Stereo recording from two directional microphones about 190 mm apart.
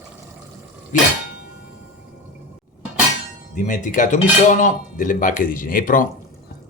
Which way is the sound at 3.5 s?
40° left (ahead or behind).